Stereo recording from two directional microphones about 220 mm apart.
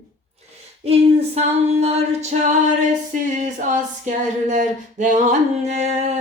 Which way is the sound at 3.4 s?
35° right (ahead or behind).